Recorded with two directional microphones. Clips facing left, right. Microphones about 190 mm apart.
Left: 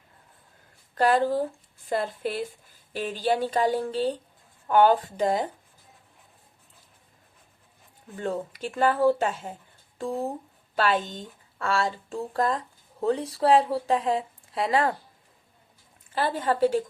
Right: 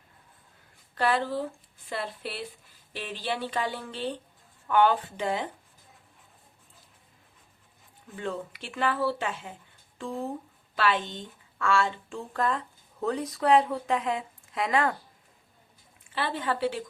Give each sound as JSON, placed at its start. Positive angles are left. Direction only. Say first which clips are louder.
{"t": 0.9, "sound": "a woman's voice", "louder": "left 5 dB", "side_deg": 45}
{"t": 8.1, "sound": "speech", "louder": "left 4 dB", "side_deg": 40}
{"t": 16.1, "sound": "speech", "louder": "left 4 dB", "side_deg": 40}